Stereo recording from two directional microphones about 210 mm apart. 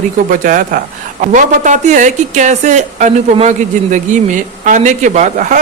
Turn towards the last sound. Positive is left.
turn(degrees=-35)  # may be behind; listen again after turning